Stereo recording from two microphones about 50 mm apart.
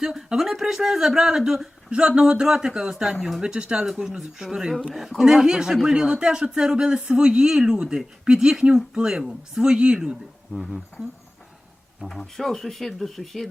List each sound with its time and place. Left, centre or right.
0.0 s speech: centre
1.9 s speech: centre
10.5 s speech: centre
12.0 s speech: centre